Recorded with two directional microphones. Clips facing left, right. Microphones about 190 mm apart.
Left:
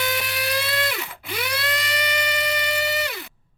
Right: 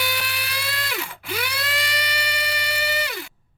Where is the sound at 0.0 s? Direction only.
Centre (ahead or behind).